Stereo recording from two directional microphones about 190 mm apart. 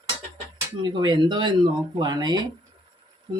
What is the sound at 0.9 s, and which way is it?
Speech, 25° right (ahead or behind).